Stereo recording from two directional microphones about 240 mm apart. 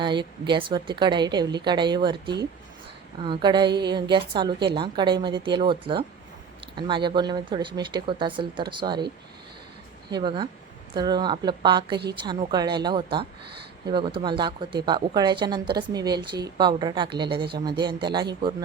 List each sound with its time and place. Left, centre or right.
0.0 s speech: centre
3.2 s speech: centre
10.1 s speech: centre
17.4 s speech: right
17.7 s speech: centre